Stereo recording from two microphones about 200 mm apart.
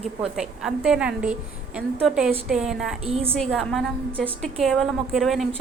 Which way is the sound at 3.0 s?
30° right (ahead or behind).